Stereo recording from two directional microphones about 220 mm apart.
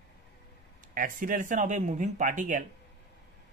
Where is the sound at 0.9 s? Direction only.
35° right (ahead or behind).